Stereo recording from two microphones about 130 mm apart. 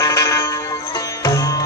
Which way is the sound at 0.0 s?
25° left (ahead or behind).